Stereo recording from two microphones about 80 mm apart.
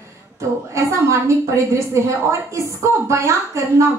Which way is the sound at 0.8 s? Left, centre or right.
Right.